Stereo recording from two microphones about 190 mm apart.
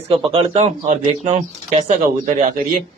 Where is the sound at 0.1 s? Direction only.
30° right (ahead or behind).